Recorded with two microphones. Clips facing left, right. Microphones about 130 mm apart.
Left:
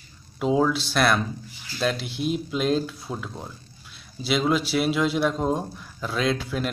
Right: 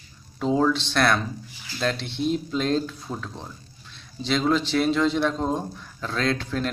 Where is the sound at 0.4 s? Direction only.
5° left (ahead or behind).